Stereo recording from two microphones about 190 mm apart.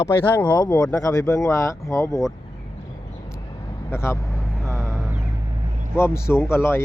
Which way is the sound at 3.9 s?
15° left (ahead or behind).